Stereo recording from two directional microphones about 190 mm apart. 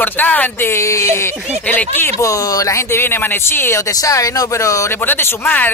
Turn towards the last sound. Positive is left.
turn(degrees=10)  # may be behind; listen again after turning